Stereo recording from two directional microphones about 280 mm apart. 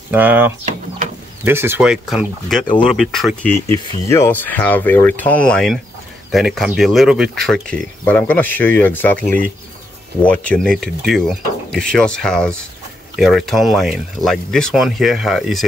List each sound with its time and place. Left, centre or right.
0.1 s speech: centre
2.6 s speech: centre
2.9 s speech: centre